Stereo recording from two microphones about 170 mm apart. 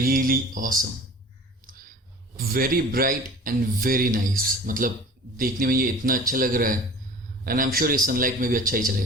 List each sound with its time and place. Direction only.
0.0 s a man's voice: 55° right (ahead or behind)
2.3 s a man's voice: 60° right (ahead or behind)